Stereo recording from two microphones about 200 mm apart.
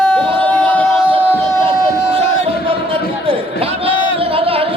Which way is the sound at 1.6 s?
25° right (ahead or behind).